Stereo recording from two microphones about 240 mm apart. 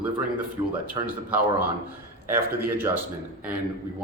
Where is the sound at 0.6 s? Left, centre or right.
Centre.